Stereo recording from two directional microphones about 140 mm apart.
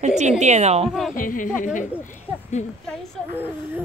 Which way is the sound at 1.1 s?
75° left (ahead or behind).